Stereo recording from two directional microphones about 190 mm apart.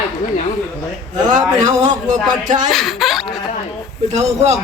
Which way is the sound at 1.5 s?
20° right (ahead or behind).